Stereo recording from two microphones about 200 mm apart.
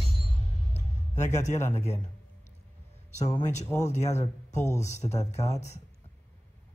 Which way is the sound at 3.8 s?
35° left (ahead or behind).